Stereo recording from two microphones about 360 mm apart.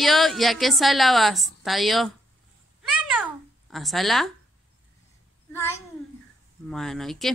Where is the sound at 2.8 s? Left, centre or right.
Centre.